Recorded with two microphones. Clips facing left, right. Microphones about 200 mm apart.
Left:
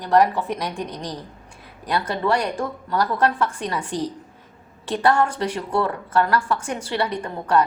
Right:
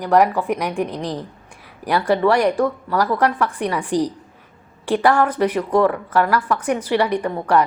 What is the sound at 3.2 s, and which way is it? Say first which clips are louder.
Speech: right 2 dB; 75° right (ahead or behind).